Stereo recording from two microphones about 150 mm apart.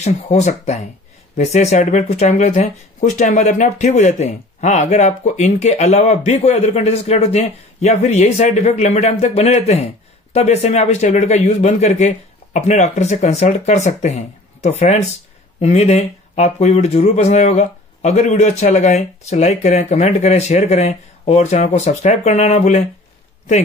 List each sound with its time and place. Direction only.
0.0 s speech: 50° left (ahead or behind)